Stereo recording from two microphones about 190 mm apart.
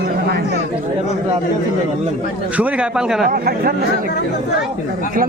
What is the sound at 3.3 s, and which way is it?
Speech, 50° right (ahead or behind).